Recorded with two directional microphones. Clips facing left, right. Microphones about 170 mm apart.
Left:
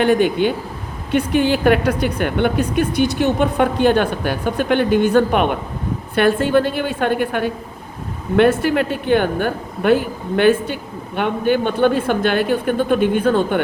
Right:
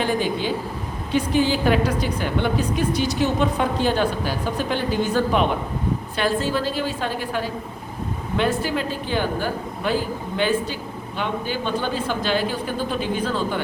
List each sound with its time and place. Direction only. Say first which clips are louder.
0.0 s a woman's voice: left 8 dB; 60° left (ahead or behind)